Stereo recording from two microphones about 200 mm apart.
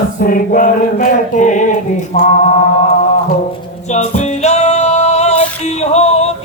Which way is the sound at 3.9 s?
35° left (ahead or behind).